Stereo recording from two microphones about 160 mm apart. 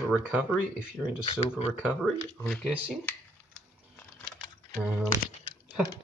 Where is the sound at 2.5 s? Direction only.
5° right (ahead or behind).